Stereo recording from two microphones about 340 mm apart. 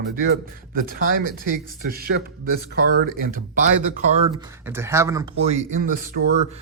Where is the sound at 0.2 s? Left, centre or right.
Right.